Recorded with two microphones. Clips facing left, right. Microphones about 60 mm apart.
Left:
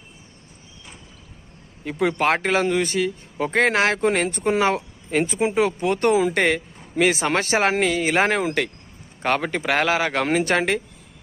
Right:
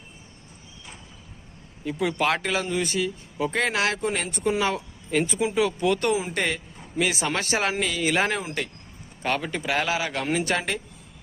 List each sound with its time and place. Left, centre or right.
1.8 s speech: left
6.3 s speech: left
8.4 s speech: left
9.2 s speech: left